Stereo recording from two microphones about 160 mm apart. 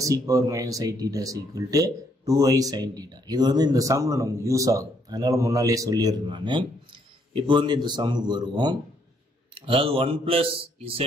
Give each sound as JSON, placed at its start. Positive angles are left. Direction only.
{"t": 0.0, "sound": "speech", "side_deg": -20}